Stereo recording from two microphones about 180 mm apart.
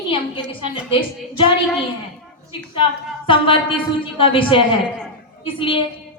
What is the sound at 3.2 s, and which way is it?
A woman's voice, 30° left (ahead or behind).